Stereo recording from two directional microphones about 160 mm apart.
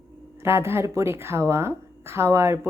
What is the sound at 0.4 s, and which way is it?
A woman's voice, 15° right (ahead or behind).